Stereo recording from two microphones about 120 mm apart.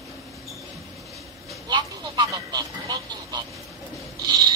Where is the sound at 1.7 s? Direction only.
30° right (ahead or behind).